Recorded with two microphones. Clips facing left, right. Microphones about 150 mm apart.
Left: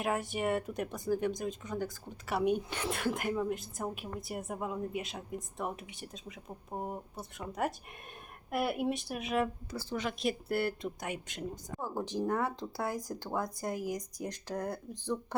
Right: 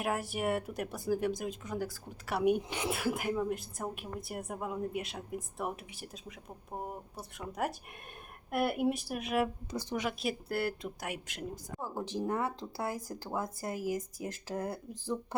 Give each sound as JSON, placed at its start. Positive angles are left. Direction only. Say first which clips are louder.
{"t": 0.0, "sound": "speech", "louder": "left 1 dB", "side_deg": -5}
{"t": 9.6, "sound": "speech", "louder": "right 1 dB", "side_deg": -15}